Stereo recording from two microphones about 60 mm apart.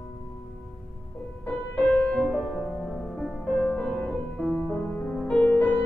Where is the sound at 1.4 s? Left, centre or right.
Left.